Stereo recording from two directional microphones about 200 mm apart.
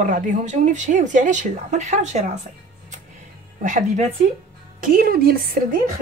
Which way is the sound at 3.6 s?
40° right (ahead or behind).